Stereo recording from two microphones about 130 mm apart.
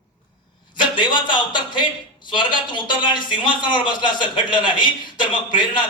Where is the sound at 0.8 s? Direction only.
35° left (ahead or behind).